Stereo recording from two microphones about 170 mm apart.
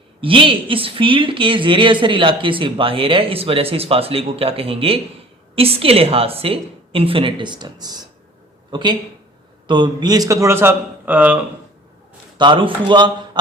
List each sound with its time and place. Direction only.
0.2 s a man's voice: 30° right (ahead or behind); by 11.4 s 10° right (ahead or behind)
12.4 s a man's voice: 30° right (ahead or behind)